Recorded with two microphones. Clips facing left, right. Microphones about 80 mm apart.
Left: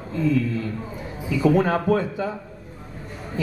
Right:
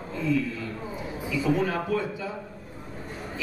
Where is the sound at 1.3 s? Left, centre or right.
Left.